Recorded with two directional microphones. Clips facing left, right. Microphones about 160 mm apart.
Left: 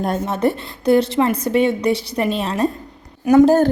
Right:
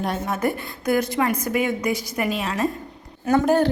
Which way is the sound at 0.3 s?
30° left (ahead or behind).